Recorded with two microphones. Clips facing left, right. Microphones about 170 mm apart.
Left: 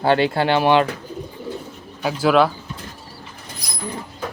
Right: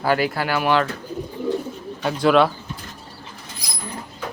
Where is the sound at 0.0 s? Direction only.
25° left (ahead or behind).